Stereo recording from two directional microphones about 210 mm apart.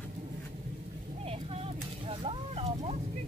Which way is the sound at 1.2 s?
30° right (ahead or behind).